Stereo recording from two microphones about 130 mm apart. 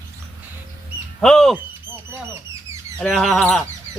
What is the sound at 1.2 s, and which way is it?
Speech, 5° left (ahead or behind).